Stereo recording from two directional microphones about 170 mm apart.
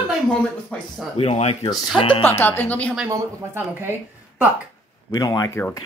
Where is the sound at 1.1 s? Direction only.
35° left (ahead or behind).